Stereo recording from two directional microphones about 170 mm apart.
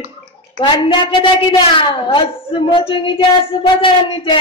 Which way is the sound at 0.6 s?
30° left (ahead or behind).